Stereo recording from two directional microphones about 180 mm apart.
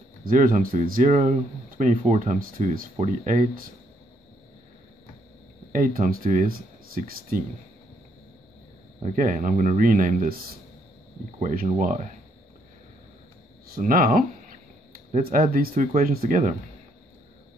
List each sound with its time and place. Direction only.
0.2 s speech: 50° right (ahead or behind)
5.7 s speech: 50° right (ahead or behind)
9.0 s speech: 45° right (ahead or behind)
11.3 s speech: 45° right (ahead or behind)
13.7 s speech: 50° right (ahead or behind)